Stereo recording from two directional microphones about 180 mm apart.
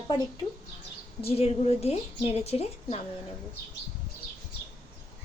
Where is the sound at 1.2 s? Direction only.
35° left (ahead or behind).